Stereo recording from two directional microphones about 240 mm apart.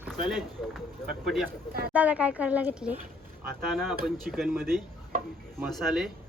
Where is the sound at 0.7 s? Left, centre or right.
Centre.